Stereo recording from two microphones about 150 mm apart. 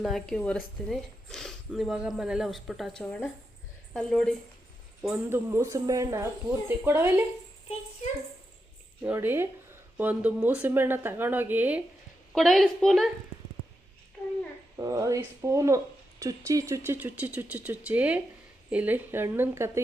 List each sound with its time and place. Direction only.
0.0 s speech: centre (ahead or behind)
3.0 s speech: 15° left (ahead or behind)
3.9 s speech: 5° left (ahead or behind)
5.0 s speech: 10° right (ahead or behind)
9.0 s speech: 15° right (ahead or behind)
12.3 s speech: centre (ahead or behind)
14.8 s speech: 20° right (ahead or behind)